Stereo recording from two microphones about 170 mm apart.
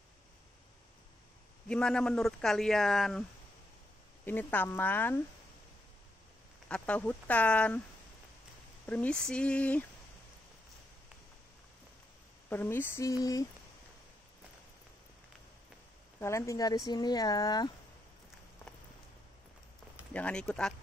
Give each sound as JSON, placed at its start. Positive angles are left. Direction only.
{"t": 1.7, "sound": "speech", "side_deg": 5}
{"t": 4.3, "sound": "speech", "side_deg": 10}
{"t": 6.7, "sound": "speech", "side_deg": 10}
{"t": 8.8, "sound": "speech", "side_deg": 10}
{"t": 12.4, "sound": "speech", "side_deg": 10}
{"t": 16.2, "sound": "speech", "side_deg": 15}
{"t": 20.1, "sound": "speech", "side_deg": 5}